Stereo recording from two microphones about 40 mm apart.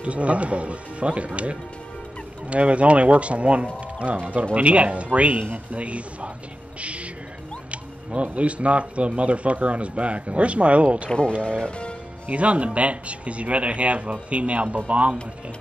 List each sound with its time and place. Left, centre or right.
0.0 s speech: right
6.8 s music: right
7.7 s speech: right
11.1 s speech: left
12.3 s speech: right